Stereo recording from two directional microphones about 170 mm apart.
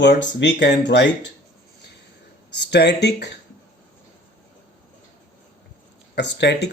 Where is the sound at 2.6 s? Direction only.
85° left.